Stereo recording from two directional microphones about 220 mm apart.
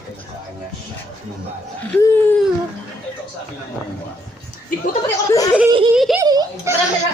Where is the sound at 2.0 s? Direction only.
10° left (ahead or behind).